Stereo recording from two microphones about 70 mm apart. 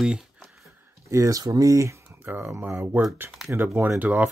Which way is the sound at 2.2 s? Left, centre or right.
Right.